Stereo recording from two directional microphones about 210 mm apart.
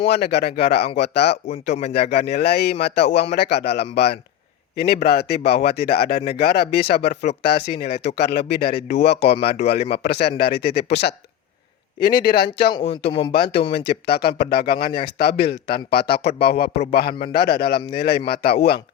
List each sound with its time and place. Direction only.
0.1 s a man's voice: 55° left (ahead or behind)
12.3 s a man's voice: 50° left (ahead or behind)
12.7 s speech: 25° left (ahead or behind)
13.7 s a man's voice: 50° left (ahead or behind)